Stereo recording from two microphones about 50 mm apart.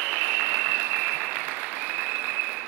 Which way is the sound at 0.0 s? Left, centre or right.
Right.